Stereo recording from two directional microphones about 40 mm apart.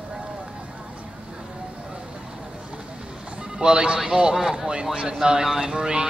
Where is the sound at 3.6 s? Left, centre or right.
Right.